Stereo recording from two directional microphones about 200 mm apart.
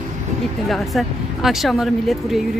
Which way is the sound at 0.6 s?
Centre (ahead or behind).